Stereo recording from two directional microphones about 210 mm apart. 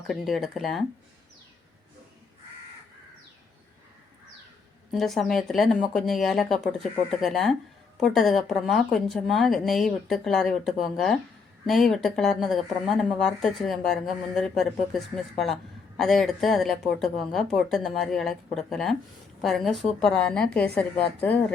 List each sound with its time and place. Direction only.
0.1 s speech: centre (ahead or behind)
4.9 s speech: centre (ahead or behind)